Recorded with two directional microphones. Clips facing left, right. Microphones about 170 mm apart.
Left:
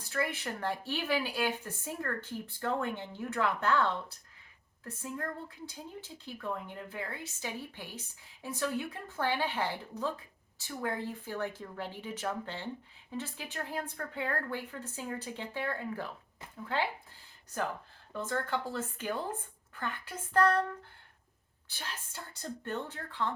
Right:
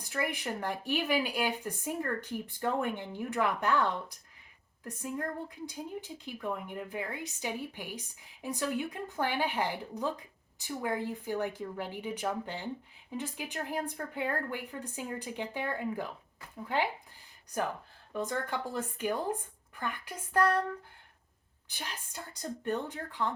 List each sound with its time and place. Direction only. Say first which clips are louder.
0.0 s speech: even; 15° right (ahead or behind)
18.1 s speech: even; 15° right (ahead or behind)
21.7 s speech: right 1 dB; 15° right (ahead or behind)